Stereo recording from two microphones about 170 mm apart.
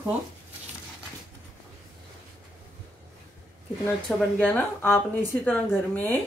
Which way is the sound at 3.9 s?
10° left (ahead or behind).